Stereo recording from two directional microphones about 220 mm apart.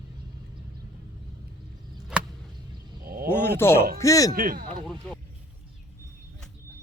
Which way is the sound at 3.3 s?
10° left (ahead or behind).